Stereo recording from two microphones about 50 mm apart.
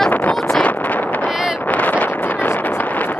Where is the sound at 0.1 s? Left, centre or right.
Left.